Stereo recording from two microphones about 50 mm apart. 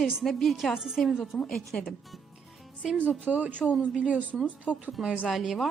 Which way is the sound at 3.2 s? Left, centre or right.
Right.